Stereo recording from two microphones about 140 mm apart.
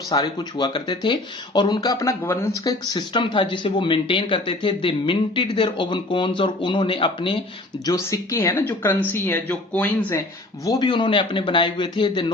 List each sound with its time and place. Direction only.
0.1 s speech: 30° left (ahead or behind)
2.6 s speech: 30° left (ahead or behind)
7.9 s speech: 25° left (ahead or behind)
10.7 s speech: 35° left (ahead or behind)